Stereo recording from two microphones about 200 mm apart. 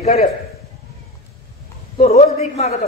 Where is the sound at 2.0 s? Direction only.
35° left (ahead or behind).